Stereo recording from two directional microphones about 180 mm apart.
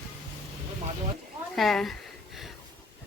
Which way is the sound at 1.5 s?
Centre (ahead or behind).